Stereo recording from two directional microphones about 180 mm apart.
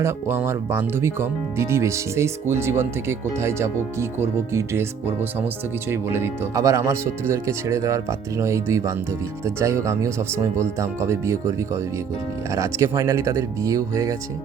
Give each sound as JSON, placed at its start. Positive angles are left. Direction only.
{"t": 0.0, "sound": "speech", "side_deg": -15}